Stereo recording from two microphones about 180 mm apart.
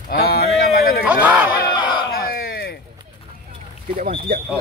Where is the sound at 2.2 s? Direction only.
60° left (ahead or behind).